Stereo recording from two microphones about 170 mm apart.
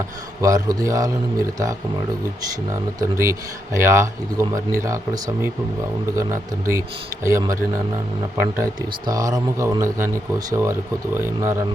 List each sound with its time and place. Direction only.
0.4 s a man's voice: 20° right (ahead or behind)
2.7 s speech: 15° right (ahead or behind)